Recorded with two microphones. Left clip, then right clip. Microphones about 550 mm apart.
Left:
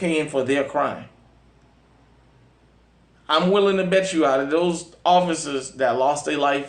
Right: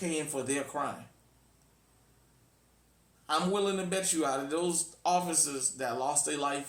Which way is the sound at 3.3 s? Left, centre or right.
Right.